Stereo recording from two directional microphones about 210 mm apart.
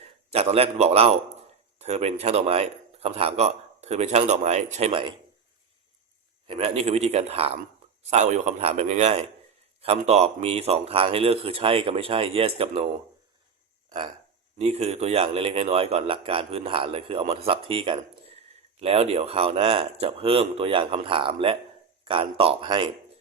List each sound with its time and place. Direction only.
0.3 s a man's voice: 30° right (ahead or behind)
6.5 s a man's voice: 30° right (ahead or behind)
14.6 s a man's voice: 30° right (ahead or behind)